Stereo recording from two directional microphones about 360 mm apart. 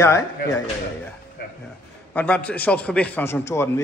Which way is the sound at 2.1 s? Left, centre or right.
Centre.